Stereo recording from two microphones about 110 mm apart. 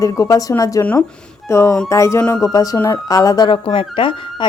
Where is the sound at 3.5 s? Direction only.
50° left (ahead or behind).